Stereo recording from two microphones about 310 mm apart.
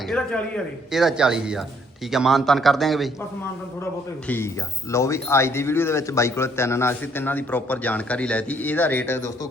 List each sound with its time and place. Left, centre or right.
0.1 s a man's voice: centre
4.3 s speech: centre